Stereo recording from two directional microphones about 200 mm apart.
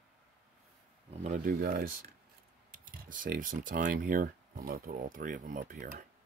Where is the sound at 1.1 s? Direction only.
40° right (ahead or behind).